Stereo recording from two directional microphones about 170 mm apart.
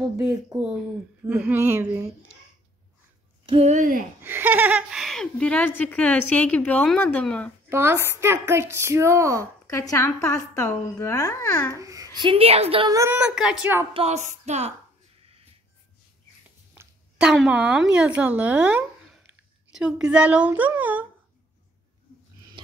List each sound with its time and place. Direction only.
0.2 s speech: 20° right (ahead or behind)
3.4 s speech: 40° right (ahead or behind)
4.2 s a woman's voice: 10° right (ahead or behind); by 7.5 s 5° left (ahead or behind)
7.7 s speech: 15° right (ahead or behind)
9.7 s a woman's voice: 15° left (ahead or behind)
11.7 s a child's voice: 20° right (ahead or behind)
12.2 s a sound: 30° right (ahead or behind)
12.8 s speech: 20° right (ahead or behind)
13.9 s a sound: 40° right (ahead or behind)
16.7 s speech: 5° right (ahead or behind)